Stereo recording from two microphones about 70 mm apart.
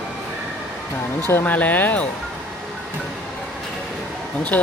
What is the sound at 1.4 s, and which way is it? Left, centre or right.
Speech, left.